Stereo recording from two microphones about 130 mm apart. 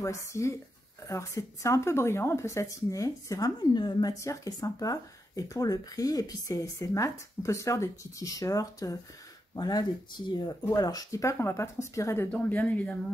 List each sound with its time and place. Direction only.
0.0 s speech: 25° left (ahead or behind)
12.3 s speech: 10° left (ahead or behind)